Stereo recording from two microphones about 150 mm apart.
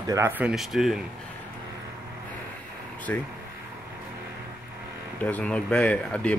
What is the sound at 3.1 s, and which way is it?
Speech, 10° left (ahead or behind).